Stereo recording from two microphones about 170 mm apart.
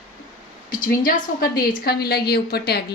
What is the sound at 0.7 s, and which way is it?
A woman's voice, 55° left (ahead or behind).